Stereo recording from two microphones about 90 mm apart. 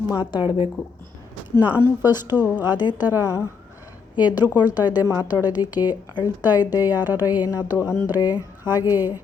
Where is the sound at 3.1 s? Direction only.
35° left (ahead or behind).